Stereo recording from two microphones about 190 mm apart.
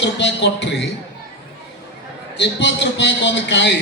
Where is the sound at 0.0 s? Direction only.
70° left (ahead or behind).